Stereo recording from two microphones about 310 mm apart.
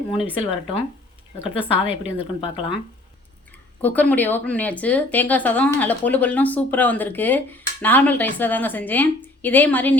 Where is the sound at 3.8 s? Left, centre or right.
Centre.